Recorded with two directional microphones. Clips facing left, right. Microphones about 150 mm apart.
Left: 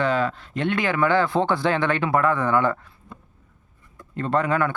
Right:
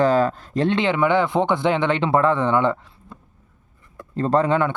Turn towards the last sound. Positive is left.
turn(degrees=-25)  # may be behind; listen again after turning